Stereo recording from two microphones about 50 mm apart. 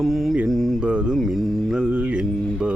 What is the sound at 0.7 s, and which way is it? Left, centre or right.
Speech, right.